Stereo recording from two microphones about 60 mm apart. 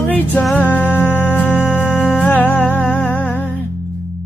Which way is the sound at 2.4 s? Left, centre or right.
Left.